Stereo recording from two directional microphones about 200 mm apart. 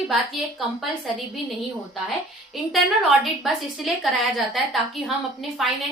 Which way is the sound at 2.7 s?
Centre (ahead or behind).